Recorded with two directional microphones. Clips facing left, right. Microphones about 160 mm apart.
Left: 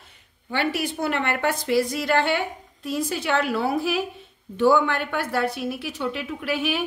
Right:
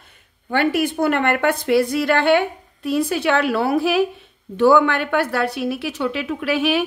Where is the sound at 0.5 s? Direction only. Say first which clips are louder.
Right 6 dB; 55° right (ahead or behind).